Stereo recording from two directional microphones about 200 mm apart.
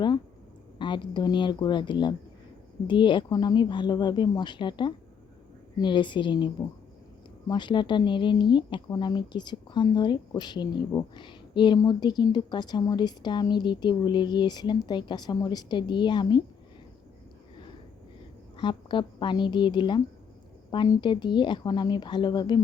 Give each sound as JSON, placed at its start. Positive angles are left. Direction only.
{"t": 0.8, "sound": "speech", "side_deg": 25}
{"t": 18.6, "sound": "speech", "side_deg": 25}